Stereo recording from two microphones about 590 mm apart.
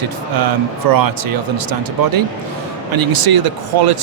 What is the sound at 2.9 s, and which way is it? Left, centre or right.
Speech, right.